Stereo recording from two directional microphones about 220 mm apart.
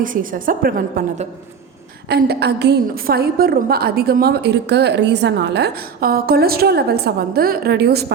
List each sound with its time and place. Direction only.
0.0 s a woman's voice: 40° right (ahead or behind)